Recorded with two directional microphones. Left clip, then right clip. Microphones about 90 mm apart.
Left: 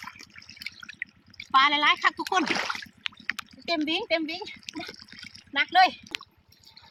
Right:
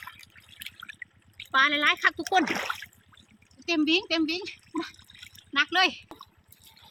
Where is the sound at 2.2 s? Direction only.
40° right (ahead or behind).